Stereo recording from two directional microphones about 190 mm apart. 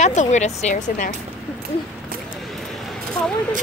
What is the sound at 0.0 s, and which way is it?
Speech, 40° left (ahead or behind).